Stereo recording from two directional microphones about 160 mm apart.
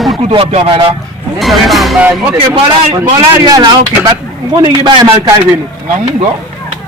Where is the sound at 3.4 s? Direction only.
25° right (ahead or behind).